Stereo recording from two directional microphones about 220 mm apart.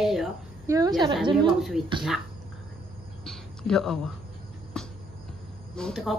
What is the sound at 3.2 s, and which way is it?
Speech, centre (ahead or behind).